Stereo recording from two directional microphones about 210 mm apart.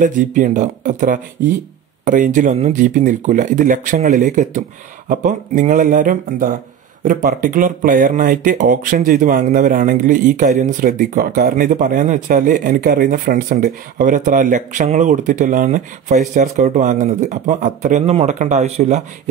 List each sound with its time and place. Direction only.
0.0 s speech: 40° right (ahead or behind)